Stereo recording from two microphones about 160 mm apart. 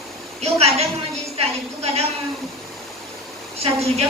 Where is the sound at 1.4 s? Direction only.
40° right (ahead or behind).